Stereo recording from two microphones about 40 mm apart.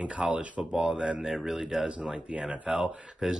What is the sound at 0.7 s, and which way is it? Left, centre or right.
Speech, right.